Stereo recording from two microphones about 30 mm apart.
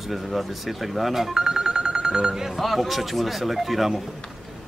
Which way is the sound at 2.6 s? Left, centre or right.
Centre.